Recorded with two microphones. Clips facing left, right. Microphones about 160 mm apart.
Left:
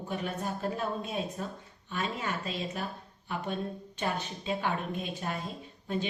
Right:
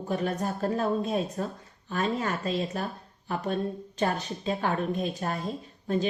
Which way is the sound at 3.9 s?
40° right (ahead or behind).